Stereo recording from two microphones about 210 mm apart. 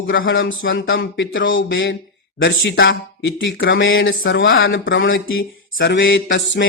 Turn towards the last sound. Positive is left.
turn(degrees=60)  # may be behind; listen again after turning